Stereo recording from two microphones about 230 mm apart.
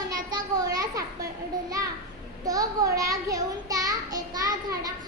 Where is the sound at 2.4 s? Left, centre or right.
Centre.